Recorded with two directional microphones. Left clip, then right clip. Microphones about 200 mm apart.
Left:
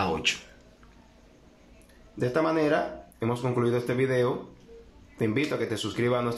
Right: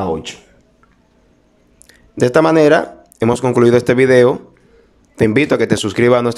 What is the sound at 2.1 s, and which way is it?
Speech, 55° right (ahead or behind).